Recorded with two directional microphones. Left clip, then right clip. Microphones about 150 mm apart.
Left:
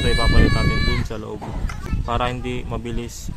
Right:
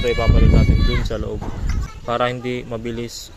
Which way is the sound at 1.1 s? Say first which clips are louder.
Right 3 dB; 15° right (ahead or behind).